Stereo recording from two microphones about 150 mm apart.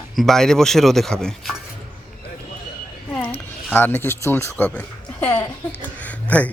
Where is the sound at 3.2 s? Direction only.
15° left (ahead or behind).